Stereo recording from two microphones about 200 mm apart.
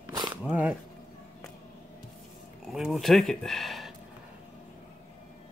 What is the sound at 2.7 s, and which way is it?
Speech, centre (ahead or behind).